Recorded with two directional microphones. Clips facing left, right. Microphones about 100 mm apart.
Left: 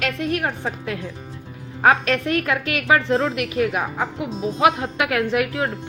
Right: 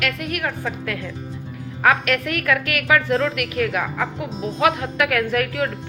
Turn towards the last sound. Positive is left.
turn(degrees=20)  # may be behind; listen again after turning